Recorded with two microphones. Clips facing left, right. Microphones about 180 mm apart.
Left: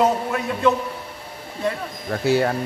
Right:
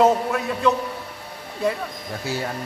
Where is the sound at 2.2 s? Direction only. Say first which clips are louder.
Left 9 dB; 60° left (ahead or behind).